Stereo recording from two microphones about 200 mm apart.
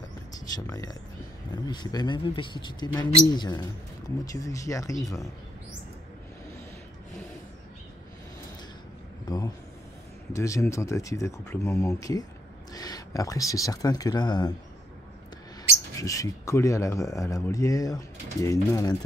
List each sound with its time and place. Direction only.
0.7 s speech: 20° left (ahead or behind)
10.3 s speech: 15° left (ahead or behind)
16.0 s speech: 15° left (ahead or behind)